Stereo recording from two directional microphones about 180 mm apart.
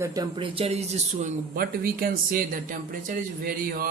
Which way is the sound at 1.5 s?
55° right (ahead or behind).